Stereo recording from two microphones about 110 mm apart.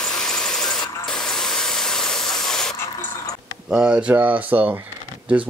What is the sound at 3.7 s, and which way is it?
Speech, 15° right (ahead or behind).